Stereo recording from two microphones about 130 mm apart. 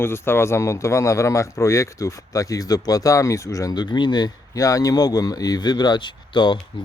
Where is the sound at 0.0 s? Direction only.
20° left (ahead or behind).